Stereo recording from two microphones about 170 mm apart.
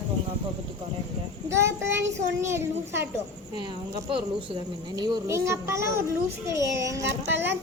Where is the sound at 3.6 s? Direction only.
30° right (ahead or behind).